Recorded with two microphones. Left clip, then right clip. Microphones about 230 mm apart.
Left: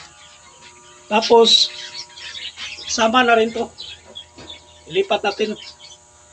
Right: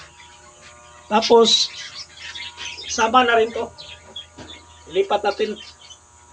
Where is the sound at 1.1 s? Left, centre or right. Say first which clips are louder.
Left 1 dB; centre.